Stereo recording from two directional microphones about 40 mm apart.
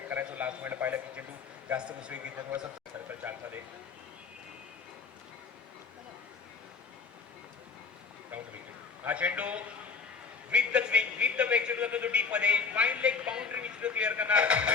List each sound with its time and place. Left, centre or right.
0.3 s a man's voice: right
0.6 s a man's voice: right
1.7 s a man's voice: right
3.1 s speech: right
9.0 s a man's voice: right